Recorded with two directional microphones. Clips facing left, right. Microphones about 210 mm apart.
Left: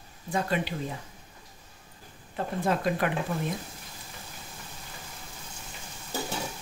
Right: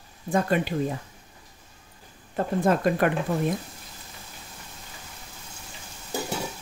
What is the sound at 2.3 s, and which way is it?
Speech, 50° right (ahead or behind).